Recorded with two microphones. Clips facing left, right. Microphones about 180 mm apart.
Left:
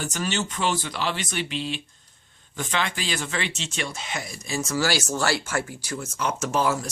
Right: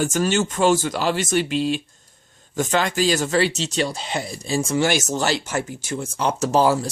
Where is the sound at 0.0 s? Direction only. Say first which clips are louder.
Right 8 dB; 45° right (ahead or behind).